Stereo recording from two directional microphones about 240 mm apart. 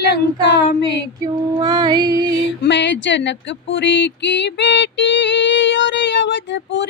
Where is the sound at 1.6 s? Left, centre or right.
Centre.